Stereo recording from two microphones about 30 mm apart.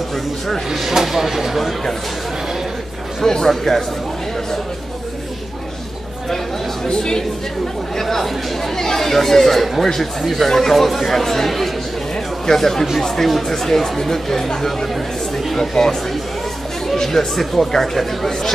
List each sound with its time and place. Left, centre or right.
1.0 s speech: centre
1.6 s speech: centre
3.2 s speech: centre
6.9 s speech: left
8.0 s speech: centre